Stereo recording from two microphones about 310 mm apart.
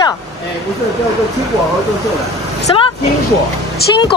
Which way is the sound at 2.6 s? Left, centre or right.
Centre.